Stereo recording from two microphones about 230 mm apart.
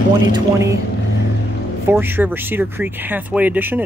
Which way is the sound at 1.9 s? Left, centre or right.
Centre.